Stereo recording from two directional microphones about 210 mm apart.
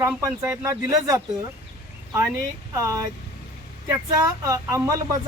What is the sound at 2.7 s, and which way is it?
Speech, 15° right (ahead or behind).